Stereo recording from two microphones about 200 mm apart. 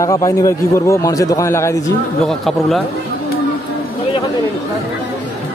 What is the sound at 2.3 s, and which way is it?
Speech, centre (ahead or behind).